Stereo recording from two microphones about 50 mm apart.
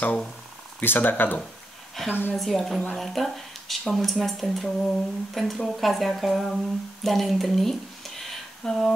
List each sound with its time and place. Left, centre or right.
0.7 s speech: left
2.0 s speech: centre